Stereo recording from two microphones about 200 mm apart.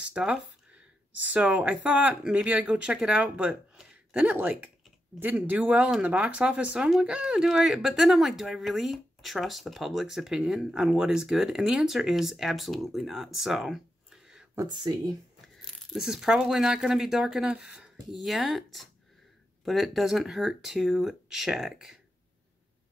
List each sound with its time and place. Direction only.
0.0 s a sound: 5° right (ahead or behind)
1.2 s speech: 5° right (ahead or behind)
14.5 s speech: 20° right (ahead or behind)
15.4 s speech: centre (ahead or behind)